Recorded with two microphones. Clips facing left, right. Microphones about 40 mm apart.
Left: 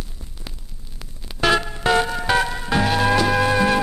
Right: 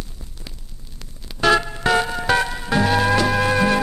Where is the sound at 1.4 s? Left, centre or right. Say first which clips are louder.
Right 2 dB; centre.